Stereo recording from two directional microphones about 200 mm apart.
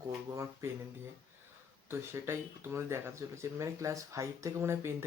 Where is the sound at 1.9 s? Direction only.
10° right (ahead or behind).